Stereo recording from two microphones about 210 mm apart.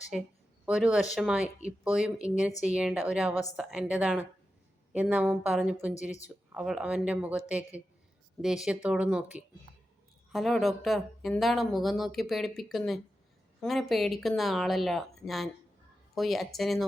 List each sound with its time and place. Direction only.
0.1 s speech: centre (ahead or behind)